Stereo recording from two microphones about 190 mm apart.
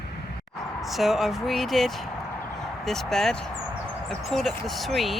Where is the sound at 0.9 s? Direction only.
Centre (ahead or behind).